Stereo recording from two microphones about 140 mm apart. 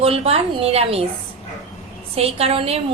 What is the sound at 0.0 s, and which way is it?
A woman's voice, 45° right (ahead or behind).